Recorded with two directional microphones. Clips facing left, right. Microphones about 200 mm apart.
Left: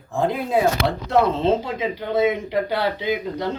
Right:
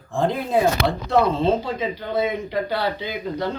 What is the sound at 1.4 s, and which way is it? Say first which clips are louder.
Speech: left 1 dB; 25° left (ahead or behind).